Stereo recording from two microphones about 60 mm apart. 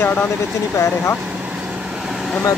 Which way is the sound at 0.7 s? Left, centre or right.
Left.